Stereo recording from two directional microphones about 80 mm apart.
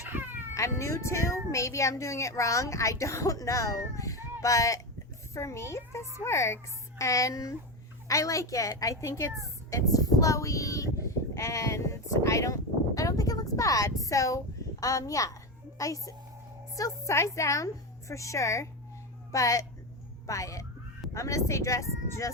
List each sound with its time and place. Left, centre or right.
0.1 s cat: right
0.5 s a woman's voice: left